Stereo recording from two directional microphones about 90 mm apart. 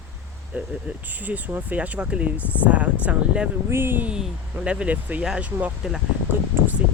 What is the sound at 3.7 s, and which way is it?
Speech, 25° right (ahead or behind).